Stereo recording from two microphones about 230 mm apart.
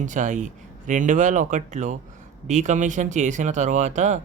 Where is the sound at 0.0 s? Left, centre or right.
Right.